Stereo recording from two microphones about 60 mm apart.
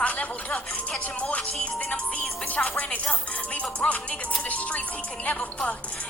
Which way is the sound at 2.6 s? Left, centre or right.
Left.